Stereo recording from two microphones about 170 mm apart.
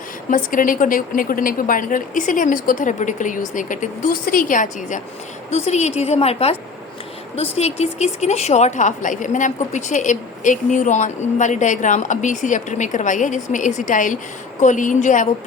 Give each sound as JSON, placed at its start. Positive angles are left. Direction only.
{"t": 0.3, "sound": "a woman's voice", "side_deg": 50}
{"t": 5.5, "sound": "a woman's voice", "side_deg": 40}